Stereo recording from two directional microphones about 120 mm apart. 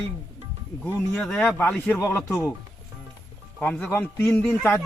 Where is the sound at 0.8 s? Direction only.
10° left (ahead or behind).